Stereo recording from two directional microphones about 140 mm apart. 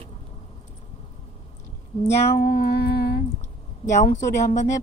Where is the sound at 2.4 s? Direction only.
90° left.